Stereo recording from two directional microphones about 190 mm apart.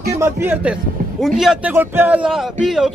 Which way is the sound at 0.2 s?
10° right (ahead or behind).